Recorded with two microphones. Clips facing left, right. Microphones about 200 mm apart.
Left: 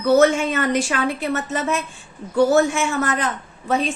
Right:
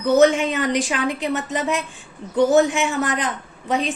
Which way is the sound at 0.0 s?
15° right (ahead or behind).